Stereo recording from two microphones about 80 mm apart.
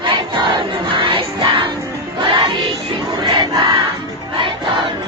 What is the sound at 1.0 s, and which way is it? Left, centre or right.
Crowd, right.